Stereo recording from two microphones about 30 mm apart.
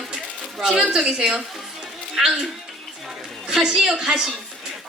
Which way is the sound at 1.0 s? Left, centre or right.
Right.